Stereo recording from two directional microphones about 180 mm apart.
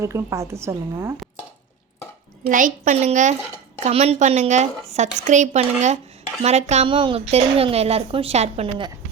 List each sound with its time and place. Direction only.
0.0 s a woman's voice: 15° right (ahead or behind)
2.5 s a woman's voice: 45° right (ahead or behind)